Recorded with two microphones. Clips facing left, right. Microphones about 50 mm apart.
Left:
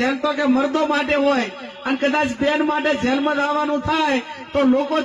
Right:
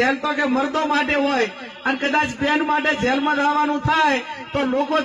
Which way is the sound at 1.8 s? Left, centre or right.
Right.